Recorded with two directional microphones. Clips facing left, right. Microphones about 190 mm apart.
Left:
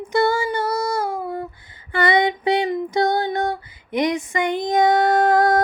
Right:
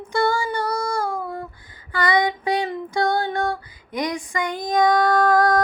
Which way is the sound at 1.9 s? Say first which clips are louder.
Left 2 dB; 25° left (ahead or behind).